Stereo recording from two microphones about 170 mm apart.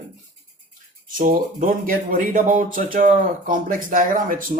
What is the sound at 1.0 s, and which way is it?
Speech, 50° right (ahead or behind).